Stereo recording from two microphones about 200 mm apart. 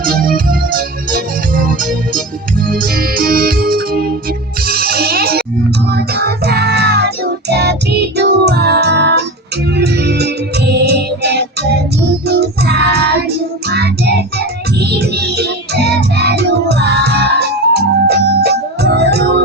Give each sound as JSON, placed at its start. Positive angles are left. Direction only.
{"t": 0.0, "sound": "music", "side_deg": -45}
{"t": 12.3, "sound": "child singing", "side_deg": -55}